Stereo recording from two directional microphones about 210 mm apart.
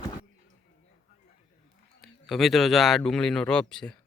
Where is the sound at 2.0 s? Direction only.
Centre (ahead or behind).